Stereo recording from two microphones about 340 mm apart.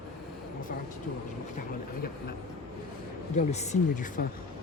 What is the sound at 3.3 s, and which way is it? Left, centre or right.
Speech, centre.